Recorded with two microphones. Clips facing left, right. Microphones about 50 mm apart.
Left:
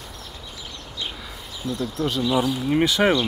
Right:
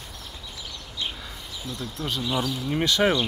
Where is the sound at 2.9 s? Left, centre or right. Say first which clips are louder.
Right 1 dB; centre.